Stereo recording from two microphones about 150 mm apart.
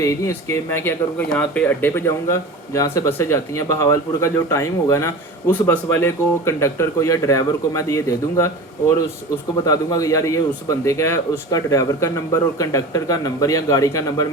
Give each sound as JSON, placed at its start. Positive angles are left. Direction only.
{"t": 0.0, "sound": "speech", "side_deg": 20}
{"t": 9.6, "sound": "speech", "side_deg": 25}